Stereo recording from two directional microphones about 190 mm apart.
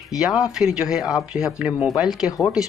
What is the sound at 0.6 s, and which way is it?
Speech, centre (ahead or behind).